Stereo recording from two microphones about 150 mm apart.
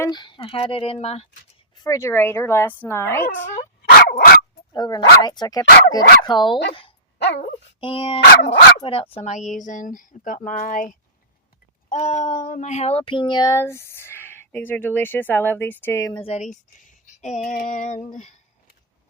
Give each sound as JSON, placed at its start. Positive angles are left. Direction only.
{"t": 0.0, "sound": "speech", "side_deg": 30}
{"t": 1.7, "sound": "speech", "side_deg": 25}
{"t": 3.8, "sound": "dog", "side_deg": 90}
{"t": 4.7, "sound": "speech", "side_deg": 25}
{"t": 7.8, "sound": "speech", "side_deg": 35}
{"t": 11.9, "sound": "speech", "side_deg": 50}
{"t": 16.1, "sound": "speech", "side_deg": 45}
{"t": 17.5, "sound": "speech", "side_deg": 65}